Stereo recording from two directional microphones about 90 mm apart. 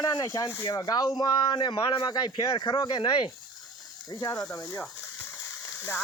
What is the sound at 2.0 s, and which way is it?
Speech, 50° left (ahead or behind).